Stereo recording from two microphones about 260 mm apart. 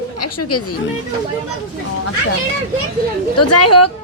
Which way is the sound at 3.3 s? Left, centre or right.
Left.